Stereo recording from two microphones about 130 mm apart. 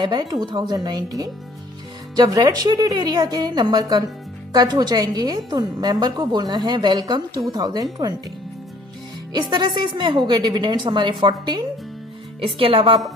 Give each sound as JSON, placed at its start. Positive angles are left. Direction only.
{"t": 0.0, "sound": "a woman's voice", "side_deg": -35}
{"t": 9.3, "sound": "a woman's voice", "side_deg": -35}